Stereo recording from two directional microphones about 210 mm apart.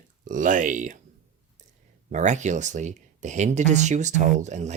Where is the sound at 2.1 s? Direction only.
35° right (ahead or behind).